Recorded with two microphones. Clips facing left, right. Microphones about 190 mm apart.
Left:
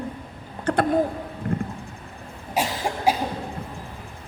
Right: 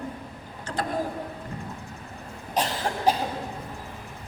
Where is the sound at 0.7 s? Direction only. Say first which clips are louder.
Left 10 dB; 60° left (ahead or behind).